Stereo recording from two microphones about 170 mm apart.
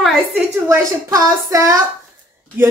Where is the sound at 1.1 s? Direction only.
20° right (ahead or behind).